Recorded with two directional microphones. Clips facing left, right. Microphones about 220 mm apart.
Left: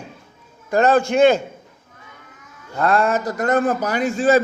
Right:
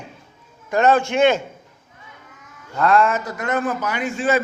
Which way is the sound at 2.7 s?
35° left (ahead or behind).